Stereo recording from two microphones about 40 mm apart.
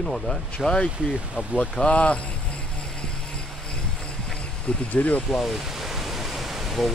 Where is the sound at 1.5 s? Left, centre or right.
Left.